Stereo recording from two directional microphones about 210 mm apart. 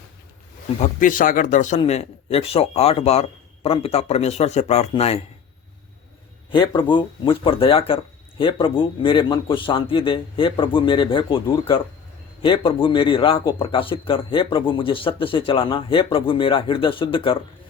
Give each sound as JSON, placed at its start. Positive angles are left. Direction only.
{"t": 0.8, "sound": "speech", "side_deg": 40}
{"t": 6.5, "sound": "speech", "side_deg": 20}